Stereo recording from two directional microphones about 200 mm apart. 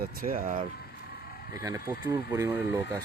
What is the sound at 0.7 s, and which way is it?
Vehicle, 50° left (ahead or behind).